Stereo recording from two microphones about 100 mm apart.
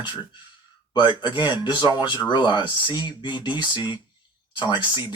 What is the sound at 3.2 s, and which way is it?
Speech, 50° left (ahead or behind).